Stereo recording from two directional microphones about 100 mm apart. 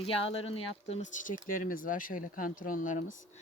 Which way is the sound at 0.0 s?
70° left (ahead or behind).